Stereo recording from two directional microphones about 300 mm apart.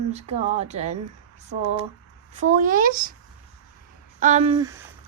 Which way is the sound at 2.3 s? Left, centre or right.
Right.